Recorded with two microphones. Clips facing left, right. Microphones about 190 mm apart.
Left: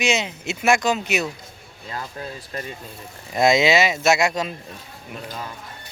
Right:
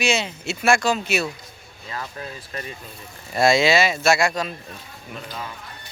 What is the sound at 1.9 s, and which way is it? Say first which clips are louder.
Speech: left 1 dB; 35° left (ahead or behind).